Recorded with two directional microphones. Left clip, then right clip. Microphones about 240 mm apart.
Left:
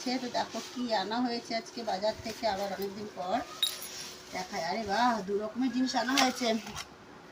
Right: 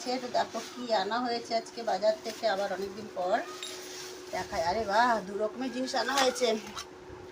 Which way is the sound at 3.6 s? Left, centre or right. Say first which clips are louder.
Left 9 dB; left.